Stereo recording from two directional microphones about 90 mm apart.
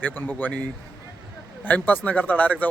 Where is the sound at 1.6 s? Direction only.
20° left (ahead or behind).